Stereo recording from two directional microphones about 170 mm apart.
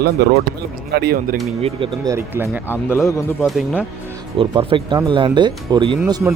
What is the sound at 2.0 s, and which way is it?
Speech, 15° right (ahead or behind).